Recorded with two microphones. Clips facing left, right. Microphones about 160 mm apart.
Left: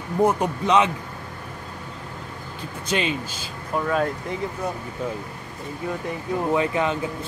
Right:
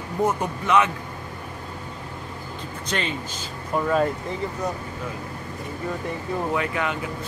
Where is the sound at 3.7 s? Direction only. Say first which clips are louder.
Right 1 dB; centre (ahead or behind).